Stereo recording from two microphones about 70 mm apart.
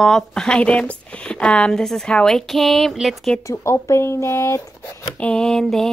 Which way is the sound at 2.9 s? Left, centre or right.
Centre.